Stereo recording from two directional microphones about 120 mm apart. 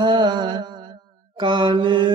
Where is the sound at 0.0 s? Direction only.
40° right (ahead or behind).